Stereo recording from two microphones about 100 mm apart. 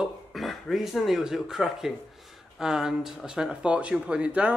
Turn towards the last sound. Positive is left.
turn(degrees=-10)  # may be behind; listen again after turning